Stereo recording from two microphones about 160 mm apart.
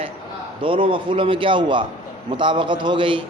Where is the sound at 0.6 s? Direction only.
30° right (ahead or behind).